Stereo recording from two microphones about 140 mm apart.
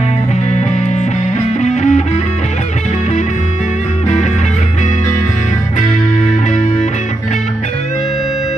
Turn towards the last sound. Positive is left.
turn(degrees=60)  # may be behind; listen again after turning